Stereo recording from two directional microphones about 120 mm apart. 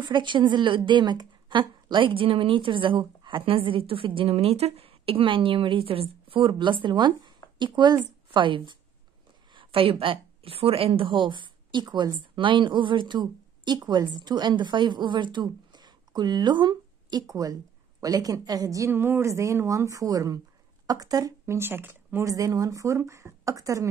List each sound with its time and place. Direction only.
0.0 s a woman's voice: 40° right (ahead or behind)